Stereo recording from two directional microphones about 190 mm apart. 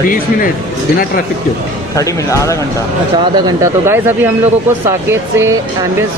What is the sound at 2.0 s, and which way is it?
Speech, 15° left (ahead or behind).